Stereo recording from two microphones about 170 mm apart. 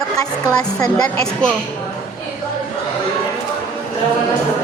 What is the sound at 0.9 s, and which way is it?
Speech, 5° left (ahead or behind).